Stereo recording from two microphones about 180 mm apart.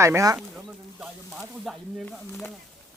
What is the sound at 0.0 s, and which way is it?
Speech, 15° right (ahead or behind).